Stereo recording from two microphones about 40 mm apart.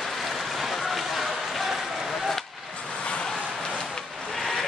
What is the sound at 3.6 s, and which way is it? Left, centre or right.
Vehicle, centre.